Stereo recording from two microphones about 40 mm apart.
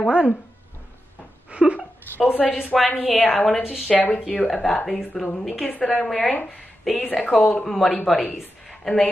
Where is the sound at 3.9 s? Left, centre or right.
Left.